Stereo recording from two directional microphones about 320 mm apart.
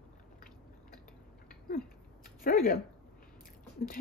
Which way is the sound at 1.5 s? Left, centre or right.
Left.